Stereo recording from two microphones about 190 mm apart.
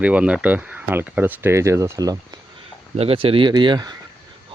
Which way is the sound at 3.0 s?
30° right (ahead or behind).